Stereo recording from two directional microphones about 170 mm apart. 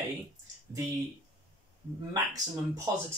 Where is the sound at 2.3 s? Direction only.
20° right (ahead or behind).